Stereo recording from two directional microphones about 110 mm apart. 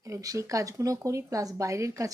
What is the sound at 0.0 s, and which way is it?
A woman's voice, 30° right (ahead or behind).